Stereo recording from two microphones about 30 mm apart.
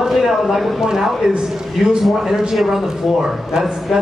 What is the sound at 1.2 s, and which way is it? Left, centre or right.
Speech, right.